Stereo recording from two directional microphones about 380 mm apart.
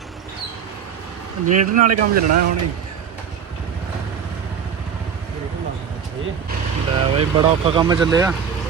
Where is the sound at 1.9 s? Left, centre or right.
Right.